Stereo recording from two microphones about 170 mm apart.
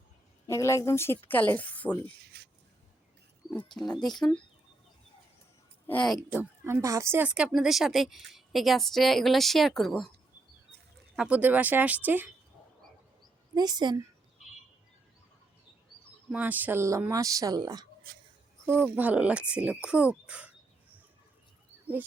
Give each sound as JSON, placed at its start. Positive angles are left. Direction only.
{"t": 0.4, "sound": "a woman's voice", "side_deg": 15}
{"t": 2.3, "sound": "a sound", "side_deg": -70}
{"t": 3.8, "sound": "speech", "side_deg": 5}
{"t": 5.9, "sound": "a woman's voice", "side_deg": 10}
{"t": 6.3, "sound": "speech", "side_deg": -10}
{"t": 11.2, "sound": "speech", "side_deg": -10}
{"t": 13.5, "sound": "a woman's voice", "side_deg": -25}
{"t": 16.3, "sound": "a woman's voice", "side_deg": -10}
{"t": 18.6, "sound": "speech", "side_deg": -10}